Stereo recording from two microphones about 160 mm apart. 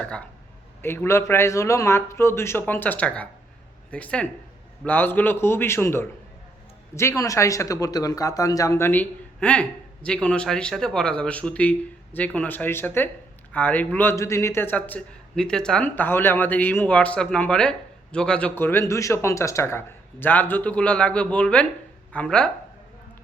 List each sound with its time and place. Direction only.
0.0 s speech: 5° left (ahead or behind)